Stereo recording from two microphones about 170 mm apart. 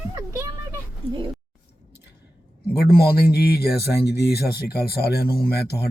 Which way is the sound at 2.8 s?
65° left (ahead or behind).